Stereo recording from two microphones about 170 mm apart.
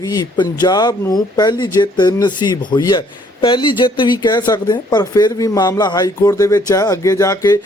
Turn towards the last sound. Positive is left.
turn(degrees=20)  # may be behind; listen again after turning